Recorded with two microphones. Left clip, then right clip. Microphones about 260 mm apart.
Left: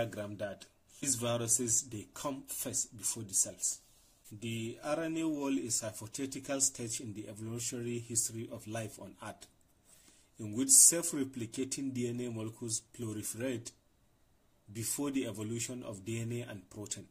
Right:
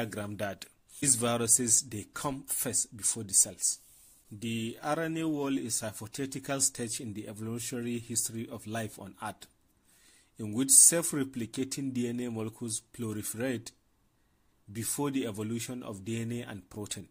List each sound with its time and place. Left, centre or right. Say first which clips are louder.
0.0 s speech: right 2 dB; right
10.4 s speech: right 2 dB; right
14.8 s speech: right 4 dB; right